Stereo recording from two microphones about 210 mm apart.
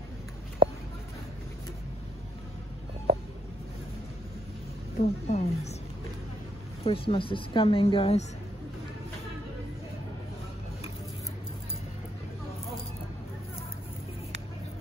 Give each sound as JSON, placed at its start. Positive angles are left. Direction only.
{"t": 4.9, "sound": "speech", "side_deg": 30}
{"t": 6.8, "sound": "a woman's voice", "side_deg": 25}